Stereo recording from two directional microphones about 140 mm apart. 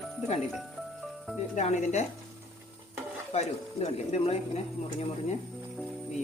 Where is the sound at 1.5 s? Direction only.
55° left (ahead or behind).